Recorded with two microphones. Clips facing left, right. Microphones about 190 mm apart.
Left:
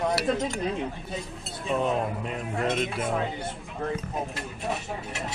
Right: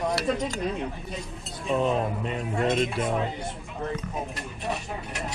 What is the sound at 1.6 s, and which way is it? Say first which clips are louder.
Cutlery: right 1 dB; centre (ahead or behind).